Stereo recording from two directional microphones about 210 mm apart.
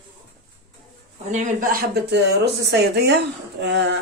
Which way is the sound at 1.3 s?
40° right (ahead or behind).